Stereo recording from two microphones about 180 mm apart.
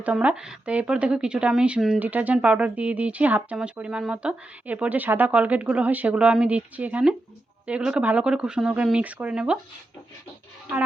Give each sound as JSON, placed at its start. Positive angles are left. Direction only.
{"t": 0.0, "sound": "a woman's voice", "side_deg": -5}